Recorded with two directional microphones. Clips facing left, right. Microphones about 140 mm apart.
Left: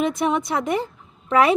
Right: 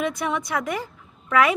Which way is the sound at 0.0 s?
25° left (ahead or behind).